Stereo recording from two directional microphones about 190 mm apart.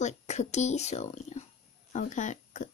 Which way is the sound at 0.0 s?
40° left (ahead or behind).